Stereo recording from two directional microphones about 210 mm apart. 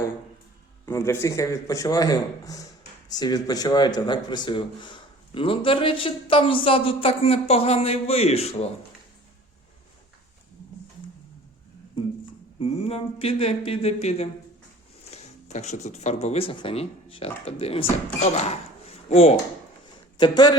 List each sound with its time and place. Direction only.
0.9 s a man's voice: 10° left (ahead or behind); by 8.7 s 30° left (ahead or behind)
12.5 s speech: 30° left (ahead or behind)
18.3 s a sound: 30° left (ahead or behind)
20.1 s speech: 20° left (ahead or behind)